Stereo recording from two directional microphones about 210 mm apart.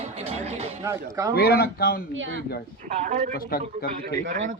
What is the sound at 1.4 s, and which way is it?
Speech, 50° left (ahead or behind).